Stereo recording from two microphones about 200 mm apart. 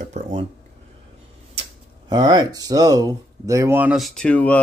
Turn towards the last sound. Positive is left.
turn(degrees=5)  # may be behind; listen again after turning